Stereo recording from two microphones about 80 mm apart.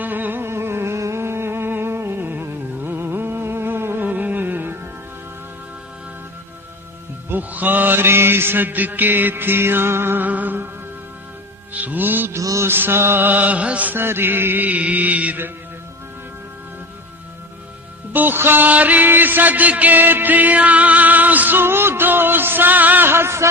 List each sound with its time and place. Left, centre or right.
0.0 s music: right
7.3 s music: right
11.7 s music: centre
12.4 s music: right
12.6 s music: right
18.1 s music: right